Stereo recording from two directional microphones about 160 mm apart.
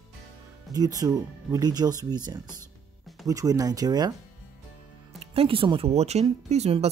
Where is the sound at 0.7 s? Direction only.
25° right (ahead or behind).